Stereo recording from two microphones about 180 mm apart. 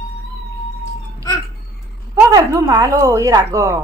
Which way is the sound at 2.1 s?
20° right (ahead or behind).